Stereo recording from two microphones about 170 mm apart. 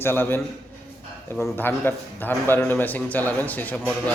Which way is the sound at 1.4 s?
10° left (ahead or behind).